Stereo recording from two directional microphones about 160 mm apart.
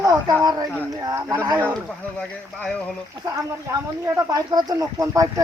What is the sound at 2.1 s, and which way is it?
Speech, 5° left (ahead or behind).